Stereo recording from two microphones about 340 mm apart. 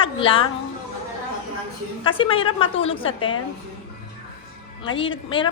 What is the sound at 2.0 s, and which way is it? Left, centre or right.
Speech, centre.